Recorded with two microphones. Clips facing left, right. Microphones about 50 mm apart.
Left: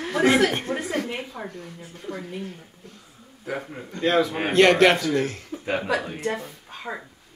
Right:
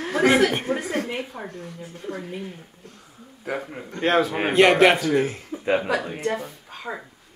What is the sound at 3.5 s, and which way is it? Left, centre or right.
Speech, centre.